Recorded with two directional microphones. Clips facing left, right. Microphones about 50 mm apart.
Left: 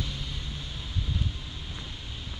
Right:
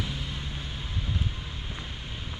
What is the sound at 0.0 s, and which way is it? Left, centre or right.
Vehicle, right.